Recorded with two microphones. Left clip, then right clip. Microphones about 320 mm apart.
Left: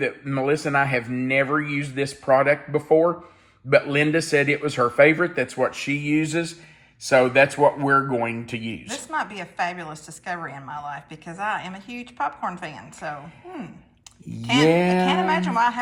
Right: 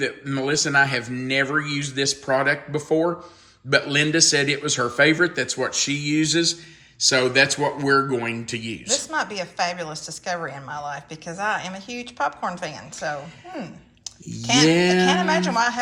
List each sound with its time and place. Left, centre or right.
0.0 s a man's voice: centre
8.9 s a woman's voice: centre